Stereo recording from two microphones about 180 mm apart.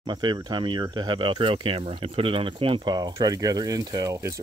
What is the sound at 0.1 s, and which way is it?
Speech, 25° right (ahead or behind).